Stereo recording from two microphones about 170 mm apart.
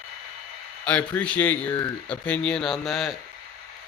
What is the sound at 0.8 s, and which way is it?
A man's voice, 5° left (ahead or behind).